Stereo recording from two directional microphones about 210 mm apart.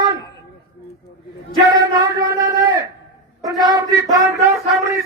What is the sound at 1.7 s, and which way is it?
A man's voice, 20° right (ahead or behind).